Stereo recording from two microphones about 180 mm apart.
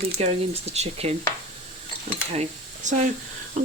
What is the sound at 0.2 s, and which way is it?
Speech, 35° right (ahead or behind).